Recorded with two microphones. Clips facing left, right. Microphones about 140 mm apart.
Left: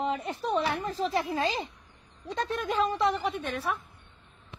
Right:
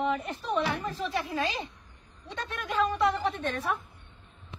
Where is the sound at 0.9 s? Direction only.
35° left (ahead or behind).